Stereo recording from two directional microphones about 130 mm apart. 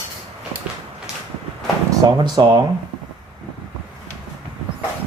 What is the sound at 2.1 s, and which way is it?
Speech, 35° right (ahead or behind).